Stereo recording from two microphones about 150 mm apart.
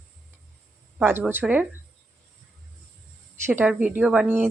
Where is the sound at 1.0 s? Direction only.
15° right (ahead or behind).